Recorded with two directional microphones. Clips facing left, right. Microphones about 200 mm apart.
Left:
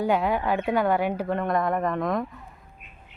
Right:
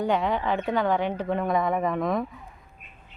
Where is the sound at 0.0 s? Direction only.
5° left (ahead or behind).